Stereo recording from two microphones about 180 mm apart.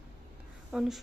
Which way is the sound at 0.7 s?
Centre (ahead or behind).